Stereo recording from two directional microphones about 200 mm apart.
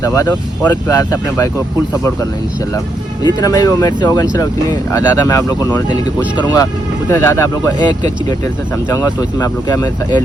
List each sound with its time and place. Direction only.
0.0 s speech: 15° left (ahead or behind)
3.4 s speech: 15° left (ahead or behind)